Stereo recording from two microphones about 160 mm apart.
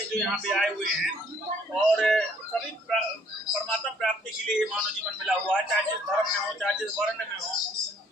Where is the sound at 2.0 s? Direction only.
5° left (ahead or behind).